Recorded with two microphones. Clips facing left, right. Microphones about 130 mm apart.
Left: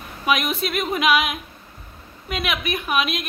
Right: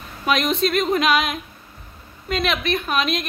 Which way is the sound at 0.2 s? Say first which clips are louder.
Right 2 dB; 5° left (ahead or behind).